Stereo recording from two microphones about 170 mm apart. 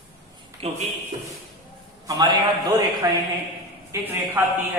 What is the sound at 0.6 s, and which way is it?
Speech, 35° right (ahead or behind).